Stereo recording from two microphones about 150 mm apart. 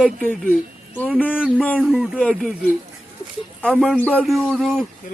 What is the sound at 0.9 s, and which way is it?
Speech, 10° left (ahead or behind).